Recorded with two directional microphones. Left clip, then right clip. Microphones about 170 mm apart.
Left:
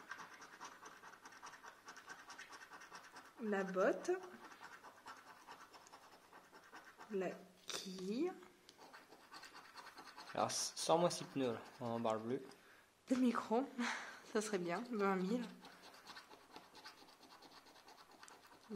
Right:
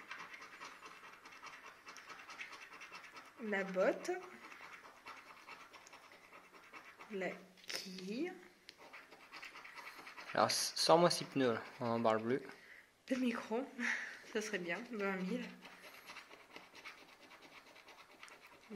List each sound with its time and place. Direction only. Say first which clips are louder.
3.4 s speech: right 2 dB; 40° left (ahead or behind)
7.2 s speech: right 1 dB; 50° left (ahead or behind)
10.6 s speech: right 5 dB; 15° right (ahead or behind)
13.1 s speech: left 1 dB; 60° left (ahead or behind)